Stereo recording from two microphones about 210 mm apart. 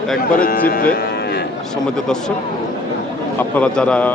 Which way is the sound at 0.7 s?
45° left (ahead or behind).